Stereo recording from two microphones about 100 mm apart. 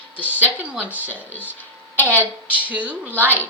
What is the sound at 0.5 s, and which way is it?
Speech, 15° right (ahead or behind).